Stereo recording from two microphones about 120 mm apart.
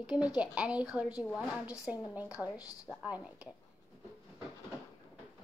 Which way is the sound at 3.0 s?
10° right (ahead or behind).